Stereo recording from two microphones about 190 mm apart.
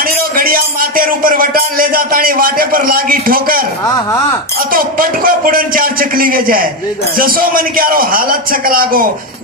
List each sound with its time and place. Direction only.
0.0 s music: 50° right (ahead or behind)
4.7 s music: 50° right (ahead or behind)